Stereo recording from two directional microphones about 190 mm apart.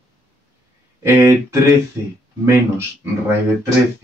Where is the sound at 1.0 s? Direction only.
15° right (ahead or behind).